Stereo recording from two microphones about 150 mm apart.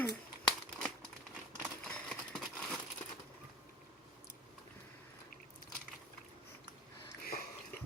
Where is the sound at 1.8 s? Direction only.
5° left (ahead or behind).